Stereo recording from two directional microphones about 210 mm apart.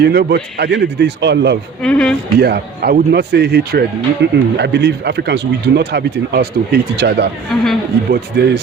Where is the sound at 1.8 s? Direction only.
5° left (ahead or behind).